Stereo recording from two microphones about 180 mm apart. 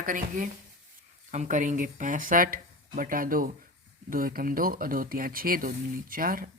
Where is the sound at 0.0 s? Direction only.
50° right (ahead or behind).